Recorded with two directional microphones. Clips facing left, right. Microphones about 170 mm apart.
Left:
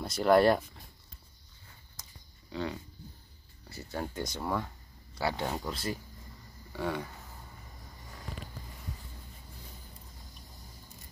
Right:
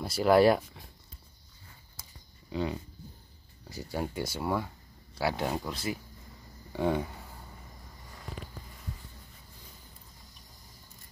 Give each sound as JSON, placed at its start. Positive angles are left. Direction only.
{"t": 0.0, "sound": "speech", "side_deg": -5}
{"t": 2.0, "sound": "a sound", "side_deg": -10}
{"t": 2.5, "sound": "speech", "side_deg": -15}
{"t": 6.7, "sound": "speech", "side_deg": -20}